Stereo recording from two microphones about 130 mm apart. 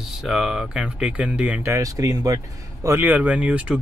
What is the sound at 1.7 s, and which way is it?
Speech, 25° right (ahead or behind).